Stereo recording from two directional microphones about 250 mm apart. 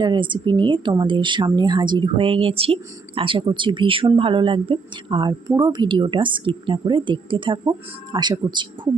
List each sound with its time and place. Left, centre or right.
0.0 s a woman's voice: centre